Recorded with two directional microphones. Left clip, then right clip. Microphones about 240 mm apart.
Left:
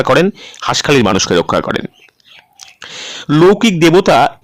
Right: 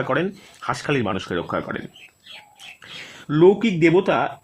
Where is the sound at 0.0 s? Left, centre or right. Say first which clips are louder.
Left 12 dB; left.